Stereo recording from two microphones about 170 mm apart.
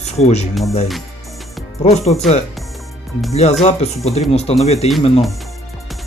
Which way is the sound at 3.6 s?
35° left (ahead or behind).